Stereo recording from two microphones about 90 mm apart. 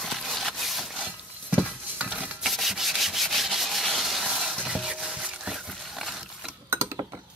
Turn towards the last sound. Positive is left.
turn(degrees=-25)  # may be behind; listen again after turning